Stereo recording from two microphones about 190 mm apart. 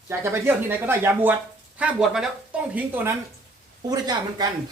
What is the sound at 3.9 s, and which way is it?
Speech, 20° right (ahead or behind).